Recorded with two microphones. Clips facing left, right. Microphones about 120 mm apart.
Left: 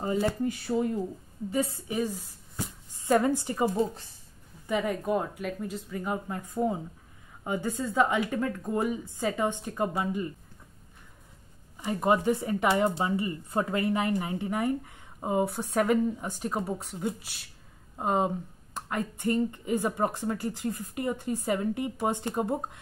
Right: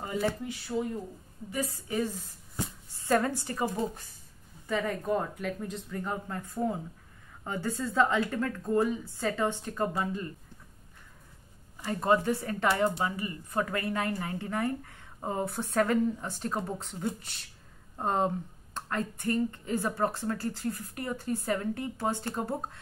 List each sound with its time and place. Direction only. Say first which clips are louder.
0.7 s speech: left 2 dB; 35° left (ahead or behind); by 2.2 s 15° left (ahead or behind)
2.6 s a sound: even; 15° left (ahead or behind)
4.6 s speech: left 2 dB; 15° left (ahead or behind)
11.8 s speech: left 1 dB; 15° left (ahead or behind)